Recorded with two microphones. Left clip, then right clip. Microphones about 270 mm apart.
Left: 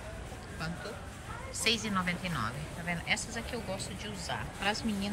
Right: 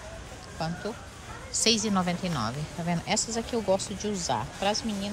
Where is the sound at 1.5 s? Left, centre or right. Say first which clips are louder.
Right 5 dB; centre.